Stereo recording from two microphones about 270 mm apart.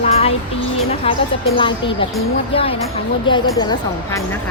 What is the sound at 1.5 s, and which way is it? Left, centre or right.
Speech, centre.